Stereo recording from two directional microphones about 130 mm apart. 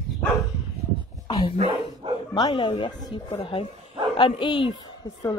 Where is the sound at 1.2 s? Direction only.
35° left (ahead or behind).